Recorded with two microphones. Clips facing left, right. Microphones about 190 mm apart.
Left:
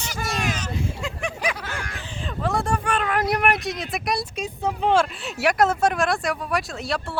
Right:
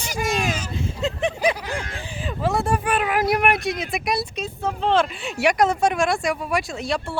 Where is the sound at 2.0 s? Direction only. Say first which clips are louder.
Right 2 dB; 5° right (ahead or behind).